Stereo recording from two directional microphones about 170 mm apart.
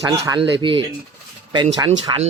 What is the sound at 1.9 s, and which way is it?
Speech, 40° right (ahead or behind).